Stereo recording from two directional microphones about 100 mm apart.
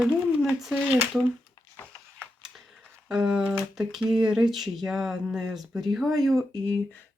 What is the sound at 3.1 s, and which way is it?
Speech, 5° right (ahead or behind).